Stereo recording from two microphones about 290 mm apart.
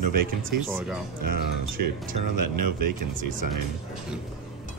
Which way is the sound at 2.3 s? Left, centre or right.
Right.